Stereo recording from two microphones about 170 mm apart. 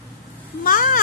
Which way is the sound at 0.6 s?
55° left (ahead or behind).